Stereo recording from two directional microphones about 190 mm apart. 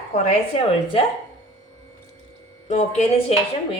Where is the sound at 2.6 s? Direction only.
35° left (ahead or behind).